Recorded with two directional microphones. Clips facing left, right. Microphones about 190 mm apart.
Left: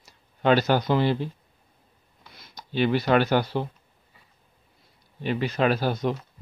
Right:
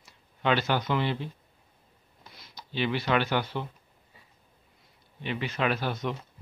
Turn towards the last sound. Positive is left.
turn(degrees=35)  # may be behind; listen again after turning